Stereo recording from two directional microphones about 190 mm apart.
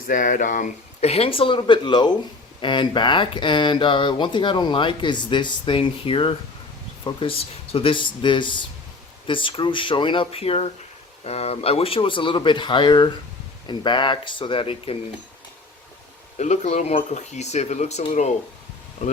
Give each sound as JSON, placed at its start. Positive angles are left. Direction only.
{"t": 0.1, "sound": "speech", "side_deg": 45}
{"t": 16.4, "sound": "speech", "side_deg": 35}